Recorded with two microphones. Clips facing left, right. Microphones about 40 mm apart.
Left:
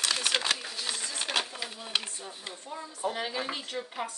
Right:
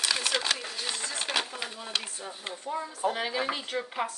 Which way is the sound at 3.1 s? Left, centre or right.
Centre.